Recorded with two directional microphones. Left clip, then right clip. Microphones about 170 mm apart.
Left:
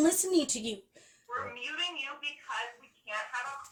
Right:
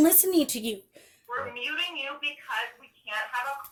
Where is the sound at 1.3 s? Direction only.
45° right (ahead or behind).